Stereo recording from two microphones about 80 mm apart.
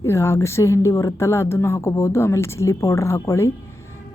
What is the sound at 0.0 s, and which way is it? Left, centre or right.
Speech, left.